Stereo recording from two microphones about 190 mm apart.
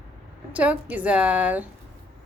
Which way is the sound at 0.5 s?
5° right (ahead or behind).